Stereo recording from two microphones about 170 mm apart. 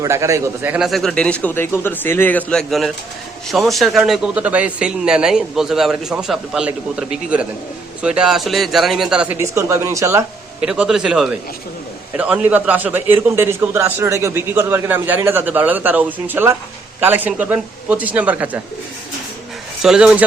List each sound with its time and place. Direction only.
0.0 s a man's voice: 15° right (ahead or behind)
0.9 s a man's voice: centre (ahead or behind); by 10.2 s 15° right (ahead or behind)
10.6 s a man's voice: 5° right (ahead or behind)
19.8 s a man's voice: 5° right (ahead or behind)